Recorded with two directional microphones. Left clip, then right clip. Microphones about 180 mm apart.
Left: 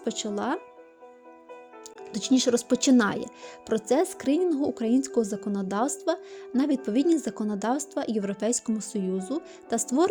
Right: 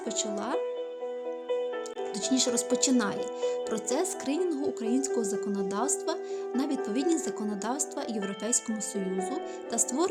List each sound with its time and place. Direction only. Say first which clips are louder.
0.0 s speech: left 2 dB; 35° left (ahead or behind)
2.1 s speech: left 5 dB; 30° left (ahead or behind)